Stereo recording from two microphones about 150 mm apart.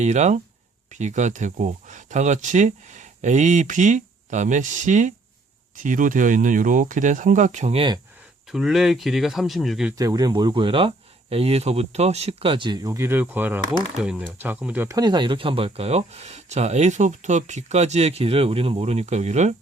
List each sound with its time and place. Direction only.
0.0 s speech: 50° right (ahead or behind)
8.5 s speech: centre (ahead or behind)
10.0 s speech: 25° right (ahead or behind)
14.8 s speech: 25° right (ahead or behind); by 19.5 s 50° right (ahead or behind)